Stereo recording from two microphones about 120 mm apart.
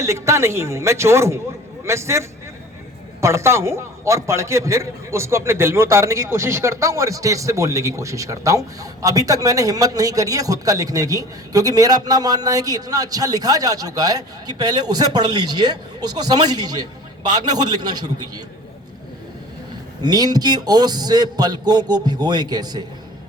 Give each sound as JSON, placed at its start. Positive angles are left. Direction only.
{"t": 0.0, "sound": "a man's voice", "side_deg": -25}
{"t": 20.0, "sound": "a man's voice", "side_deg": -35}